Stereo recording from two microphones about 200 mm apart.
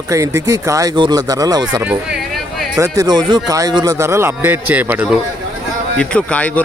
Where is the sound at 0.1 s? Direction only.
15° right (ahead or behind).